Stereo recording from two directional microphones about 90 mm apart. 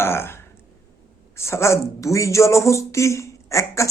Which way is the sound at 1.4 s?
30° left (ahead or behind).